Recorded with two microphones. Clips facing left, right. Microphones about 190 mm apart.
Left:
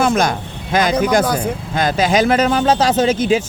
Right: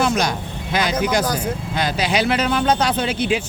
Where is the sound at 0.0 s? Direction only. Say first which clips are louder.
Left 4 dB; 50° left (ahead or behind).